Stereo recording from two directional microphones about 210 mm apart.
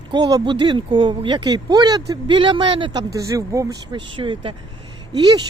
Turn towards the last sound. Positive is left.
turn(degrees=-20)  # may be behind; listen again after turning